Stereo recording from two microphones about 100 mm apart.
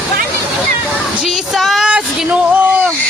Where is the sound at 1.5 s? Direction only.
Centre (ahead or behind).